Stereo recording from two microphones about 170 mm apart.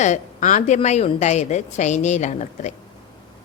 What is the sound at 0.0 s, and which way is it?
A woman's voice, 45° left (ahead or behind).